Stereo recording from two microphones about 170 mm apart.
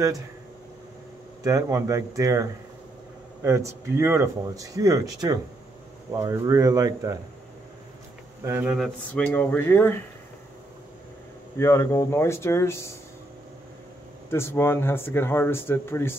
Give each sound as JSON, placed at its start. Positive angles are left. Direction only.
{"t": 1.4, "sound": "speech", "side_deg": -20}
{"t": 3.4, "sound": "speech", "side_deg": -15}
{"t": 8.5, "sound": "speech", "side_deg": -10}
{"t": 8.7, "sound": "speech", "side_deg": 5}
{"t": 11.5, "sound": "speech", "side_deg": 15}
{"t": 14.3, "sound": "speech", "side_deg": 15}